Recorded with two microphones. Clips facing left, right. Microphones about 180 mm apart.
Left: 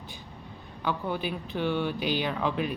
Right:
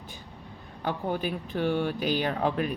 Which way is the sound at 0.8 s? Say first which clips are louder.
Right 1 dB; 45° right (ahead or behind).